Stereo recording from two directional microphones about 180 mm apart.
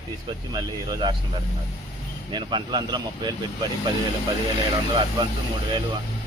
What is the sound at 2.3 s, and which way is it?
Speech, 25° right (ahead or behind).